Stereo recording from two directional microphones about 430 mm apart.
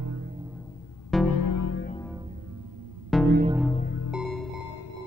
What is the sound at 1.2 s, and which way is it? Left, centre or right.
Music, left.